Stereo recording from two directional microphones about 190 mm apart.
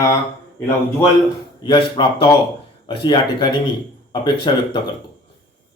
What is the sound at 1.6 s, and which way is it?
Speech, 25° left (ahead or behind).